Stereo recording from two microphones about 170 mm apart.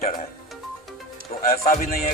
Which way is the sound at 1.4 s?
50° left (ahead or behind).